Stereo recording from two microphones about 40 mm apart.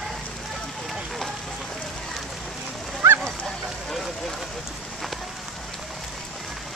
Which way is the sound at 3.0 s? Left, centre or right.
Right.